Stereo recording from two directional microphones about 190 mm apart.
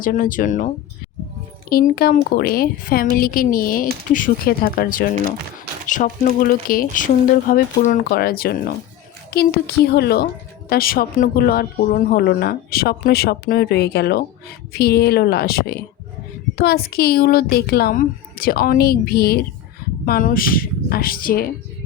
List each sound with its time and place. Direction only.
0.0 s a woman's voice: 45° left (ahead or behind)
1.7 s a woman's voice: 50° left (ahead or behind)